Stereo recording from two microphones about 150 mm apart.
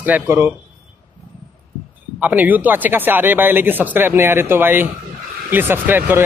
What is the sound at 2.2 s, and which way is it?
Speech, 10° right (ahead or behind).